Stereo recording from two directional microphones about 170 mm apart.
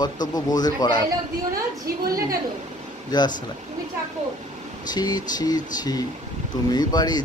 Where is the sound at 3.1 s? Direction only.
25° left (ahead or behind).